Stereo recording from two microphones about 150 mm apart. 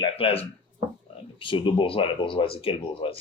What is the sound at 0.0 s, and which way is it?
Speech, 40° left (ahead or behind).